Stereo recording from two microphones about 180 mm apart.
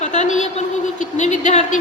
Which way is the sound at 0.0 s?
40° left (ahead or behind).